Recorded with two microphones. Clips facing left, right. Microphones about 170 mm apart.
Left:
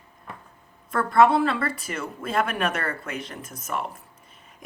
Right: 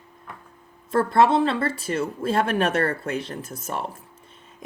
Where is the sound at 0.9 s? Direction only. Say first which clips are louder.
Even; 25° right (ahead or behind).